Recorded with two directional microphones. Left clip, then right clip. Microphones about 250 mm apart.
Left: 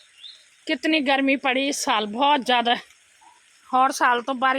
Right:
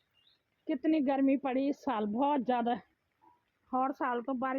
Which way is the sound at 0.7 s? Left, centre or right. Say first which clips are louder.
Left 10 dB; centre.